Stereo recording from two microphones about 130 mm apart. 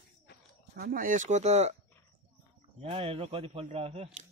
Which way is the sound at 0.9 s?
90° right.